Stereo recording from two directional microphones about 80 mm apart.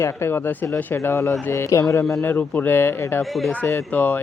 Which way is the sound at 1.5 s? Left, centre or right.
Left.